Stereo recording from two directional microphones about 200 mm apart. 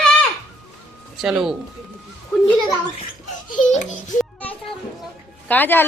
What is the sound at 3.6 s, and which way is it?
Speech, 40° left (ahead or behind).